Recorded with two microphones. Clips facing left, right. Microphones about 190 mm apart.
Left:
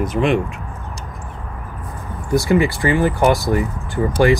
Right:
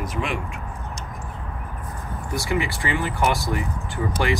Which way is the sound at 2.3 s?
40° left (ahead or behind).